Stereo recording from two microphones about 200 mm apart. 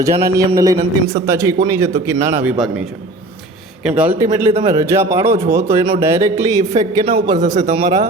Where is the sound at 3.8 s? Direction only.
5° right (ahead or behind).